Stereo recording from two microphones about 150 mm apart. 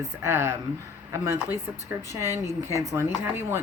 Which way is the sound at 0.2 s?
15° right (ahead or behind).